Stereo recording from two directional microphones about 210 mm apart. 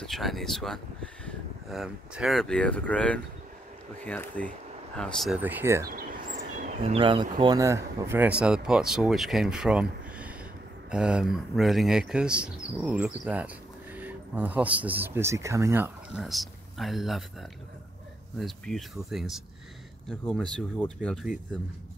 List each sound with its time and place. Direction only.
0.0 s speech: centre (ahead or behind)
5.9 s a sound: 45° right (ahead or behind); by 7.2 s 25° right (ahead or behind)
7.3 s speech: 20° right (ahead or behind); by 21.5 s centre (ahead or behind)